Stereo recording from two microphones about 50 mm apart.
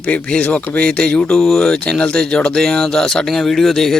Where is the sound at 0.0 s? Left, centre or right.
Centre.